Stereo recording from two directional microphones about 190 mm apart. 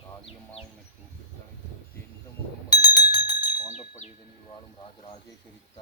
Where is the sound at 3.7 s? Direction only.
35° left (ahead or behind).